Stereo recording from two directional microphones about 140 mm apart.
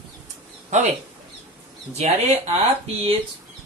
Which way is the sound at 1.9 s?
50° right (ahead or behind).